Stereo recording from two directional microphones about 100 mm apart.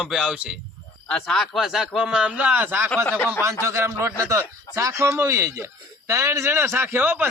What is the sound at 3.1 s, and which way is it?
Speech, 20° left (ahead or behind).